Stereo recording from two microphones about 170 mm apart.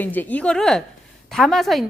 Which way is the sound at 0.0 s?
10° left (ahead or behind).